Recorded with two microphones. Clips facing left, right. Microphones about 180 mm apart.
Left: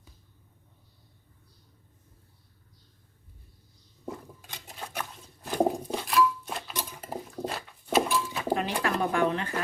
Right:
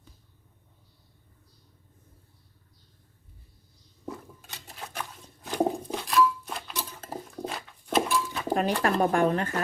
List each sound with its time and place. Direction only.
4.0 s dishes: 10° left (ahead or behind)
4.9 s patter: 10° left (ahead or behind)
6.9 s a sound: 10° left (ahead or behind)
7.4 s dog: 5° left (ahead or behind)
8.8 s speech: 45° right (ahead or behind)